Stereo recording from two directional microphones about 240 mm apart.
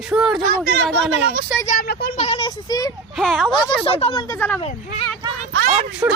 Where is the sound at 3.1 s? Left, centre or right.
Centre.